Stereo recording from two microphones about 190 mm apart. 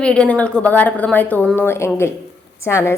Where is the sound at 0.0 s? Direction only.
5° left (ahead or behind).